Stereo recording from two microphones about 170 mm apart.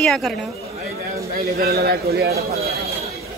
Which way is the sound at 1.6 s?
65° right (ahead or behind).